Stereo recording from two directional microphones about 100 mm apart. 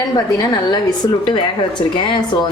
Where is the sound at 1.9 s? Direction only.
50° left (ahead or behind).